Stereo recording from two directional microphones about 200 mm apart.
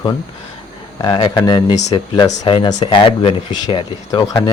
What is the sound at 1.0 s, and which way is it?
Speech, 25° left (ahead or behind).